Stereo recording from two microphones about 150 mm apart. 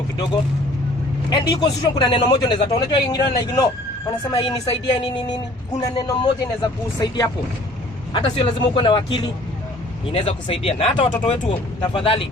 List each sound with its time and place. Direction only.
1.3 s a man's voice: 30° left (ahead or behind)